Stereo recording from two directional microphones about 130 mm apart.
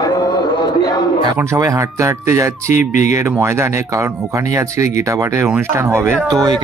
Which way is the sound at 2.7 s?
75° left (ahead or behind).